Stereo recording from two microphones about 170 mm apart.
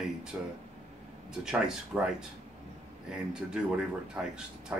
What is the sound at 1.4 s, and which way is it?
Speech, 5° right (ahead or behind).